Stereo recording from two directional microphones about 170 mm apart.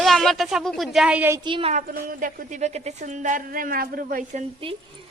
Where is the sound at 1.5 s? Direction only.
30° right (ahead or behind).